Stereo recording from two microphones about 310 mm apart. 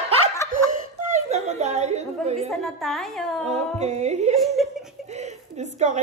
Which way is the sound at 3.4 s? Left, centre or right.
Right.